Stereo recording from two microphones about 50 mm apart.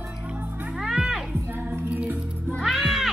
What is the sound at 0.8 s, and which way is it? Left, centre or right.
Music, centre.